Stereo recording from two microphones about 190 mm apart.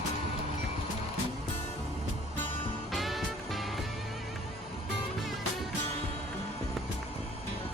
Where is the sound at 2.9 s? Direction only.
Centre (ahead or behind).